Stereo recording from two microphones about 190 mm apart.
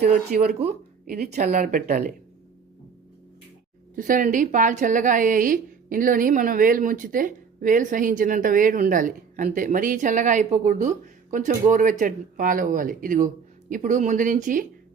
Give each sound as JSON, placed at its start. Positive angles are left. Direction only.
{"t": 0.0, "sound": "speech", "side_deg": -35}
{"t": 1.0, "sound": "speech", "side_deg": -50}
{"t": 1.4, "sound": "a woman's voice", "side_deg": -40}
{"t": 3.9, "sound": "a woman's voice", "side_deg": -45}